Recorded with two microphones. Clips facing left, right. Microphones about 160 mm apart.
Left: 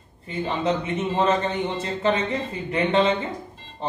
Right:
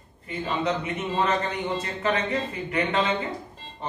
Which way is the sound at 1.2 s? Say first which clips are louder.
Left 4 dB; 25° left (ahead or behind).